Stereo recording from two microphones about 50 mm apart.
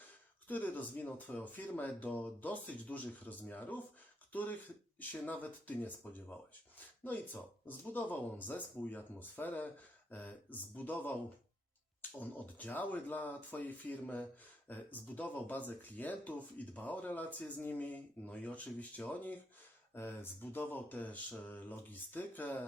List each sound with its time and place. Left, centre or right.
0.4 s speech: left
7.7 s speech: left
12.2 s speech: left
19.9 s speech: left